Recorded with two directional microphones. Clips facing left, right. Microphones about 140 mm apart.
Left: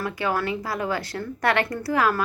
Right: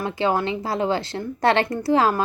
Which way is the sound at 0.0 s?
25° right (ahead or behind).